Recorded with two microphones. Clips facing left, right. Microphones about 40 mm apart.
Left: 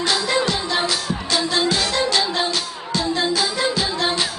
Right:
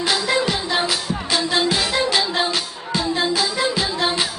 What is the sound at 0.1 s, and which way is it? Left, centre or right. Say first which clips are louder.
Music: right 1 dB; centre.